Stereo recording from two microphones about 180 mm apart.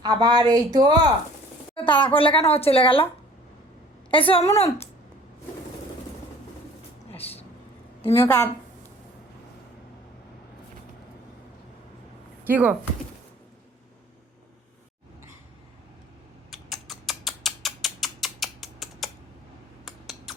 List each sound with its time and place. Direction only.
0.0 s speech: 25° right (ahead or behind)
1.7 s a woman's voice: 30° left (ahead or behind)
4.1 s a woman's voice: 30° left (ahead or behind)
7.1 s a sound: 35° left (ahead or behind)
8.1 s a woman's voice: 15° left (ahead or behind)
12.5 s speech: 10° right (ahead or behind)
16.5 s rodents: centre (ahead or behind)
19.8 s a sound: centre (ahead or behind)